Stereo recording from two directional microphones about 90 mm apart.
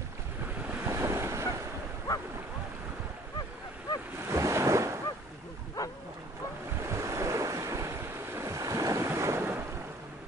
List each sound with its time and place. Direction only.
0.8 s waves: 35° right (ahead or behind)
4.3 s waves: 30° right (ahead or behind)
5.8 s dog: 35° left (ahead or behind)
6.8 s waves: 35° right (ahead or behind)